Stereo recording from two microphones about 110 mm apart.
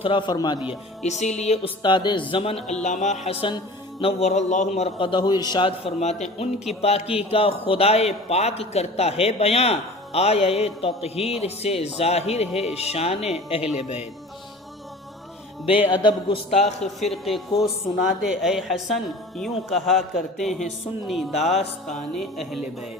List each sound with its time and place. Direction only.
0.0 s speech: 50° left (ahead or behind)
0.7 s speech: 90° left
1.8 s a man's voice: 45° left (ahead or behind)
2.3 s speech: 60° left (ahead or behind)
2.8 s speech: 90° left; by 3.5 s 65° left (ahead or behind)
4.0 s speech: 90° left
4.9 s a man's voice: 50° left (ahead or behind)
6.0 s speech: 90° left
6.8 s a man's voice: 65° left (ahead or behind)
15.6 s speech: 55° left (ahead or behind)
16.5 s a man's voice: 75° left (ahead or behind)
17.0 s a woman's voice: centre (ahead or behind)
21.8 s a woman's voice: centre (ahead or behind)